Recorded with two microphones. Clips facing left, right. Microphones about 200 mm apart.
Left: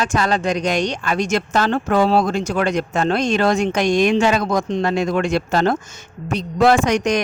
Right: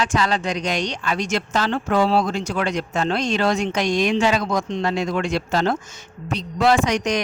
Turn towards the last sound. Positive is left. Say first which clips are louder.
# left 3 dB
turn(degrees=50)  # may be behind; listen again after turning